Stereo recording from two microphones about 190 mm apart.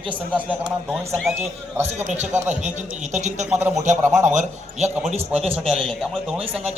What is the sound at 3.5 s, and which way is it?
Speech, 10° right (ahead or behind).